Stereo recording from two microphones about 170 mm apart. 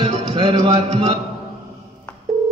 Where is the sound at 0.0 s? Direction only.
30° right (ahead or behind).